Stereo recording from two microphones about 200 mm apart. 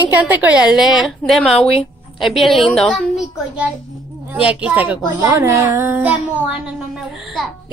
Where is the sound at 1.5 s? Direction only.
30° left (ahead or behind).